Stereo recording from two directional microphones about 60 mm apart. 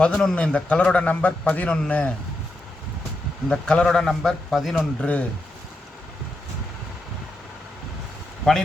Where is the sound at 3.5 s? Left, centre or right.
Centre.